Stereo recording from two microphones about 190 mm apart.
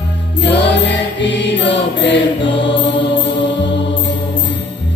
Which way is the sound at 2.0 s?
70° left (ahead or behind).